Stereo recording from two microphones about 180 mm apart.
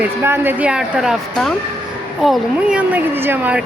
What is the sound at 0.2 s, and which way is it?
A woman's voice, 10° right (ahead or behind).